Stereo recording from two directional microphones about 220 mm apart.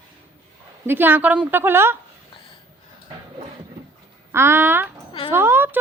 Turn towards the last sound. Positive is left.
turn(degrees=-10)  # may be behind; listen again after turning